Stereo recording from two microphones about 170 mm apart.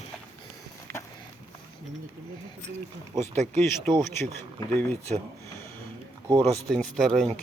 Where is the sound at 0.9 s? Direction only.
65° right (ahead or behind).